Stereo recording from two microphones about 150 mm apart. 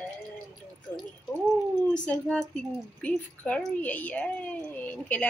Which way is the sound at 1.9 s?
5° left (ahead or behind).